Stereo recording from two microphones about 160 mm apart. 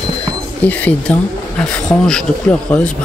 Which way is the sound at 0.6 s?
10° left (ahead or behind).